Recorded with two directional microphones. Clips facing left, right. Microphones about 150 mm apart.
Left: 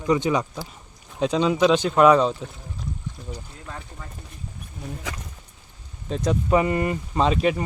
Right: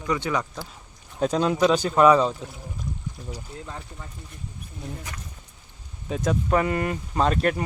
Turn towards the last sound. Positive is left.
turn(degrees=0)  # may be behind; listen again after turning